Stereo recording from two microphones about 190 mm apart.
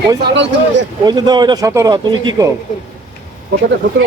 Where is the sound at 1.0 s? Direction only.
20° right (ahead or behind).